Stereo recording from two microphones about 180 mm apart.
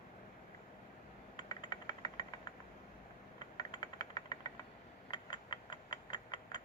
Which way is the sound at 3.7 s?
20° left (ahead or behind).